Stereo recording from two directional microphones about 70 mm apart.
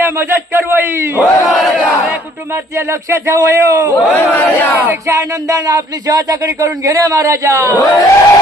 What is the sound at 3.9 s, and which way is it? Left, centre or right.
Speech, left.